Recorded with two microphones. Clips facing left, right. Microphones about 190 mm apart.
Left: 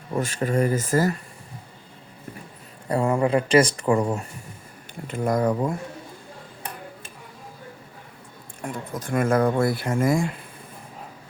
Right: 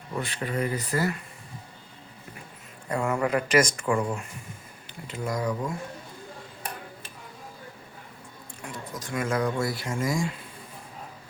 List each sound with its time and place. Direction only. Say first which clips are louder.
0.2 s speech: left 6 dB; 45° left (ahead or behind)
2.9 s speech: left 5 dB; 30° left (ahead or behind)
5.0 s speech: left 7 dB; 55° left (ahead or behind)
8.6 s speech: left 6 dB; 55° left (ahead or behind)